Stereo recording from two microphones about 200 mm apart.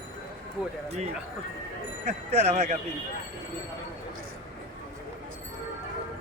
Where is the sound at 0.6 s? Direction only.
5° right (ahead or behind).